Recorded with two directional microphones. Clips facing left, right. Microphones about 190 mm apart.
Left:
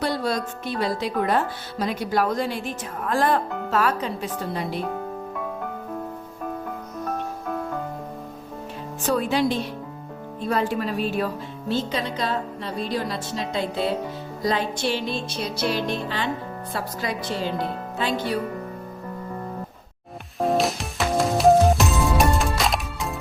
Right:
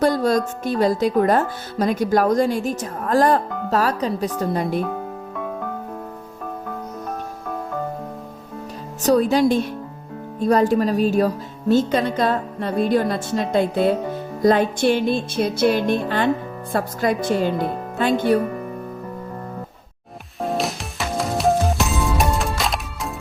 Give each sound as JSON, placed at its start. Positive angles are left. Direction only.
{"t": 0.0, "sound": "speech", "side_deg": -45}
{"t": 9.0, "sound": "speech", "side_deg": -40}
{"t": 20.4, "sound": "music", "side_deg": 0}